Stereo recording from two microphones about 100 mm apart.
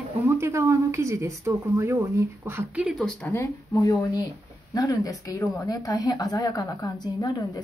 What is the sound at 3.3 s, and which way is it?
A woman's voice, 30° left (ahead or behind).